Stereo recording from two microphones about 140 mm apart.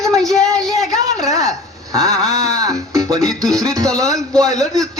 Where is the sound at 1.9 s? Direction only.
25° right (ahead or behind).